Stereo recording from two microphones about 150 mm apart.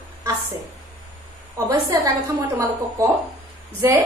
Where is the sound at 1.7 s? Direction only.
25° right (ahead or behind).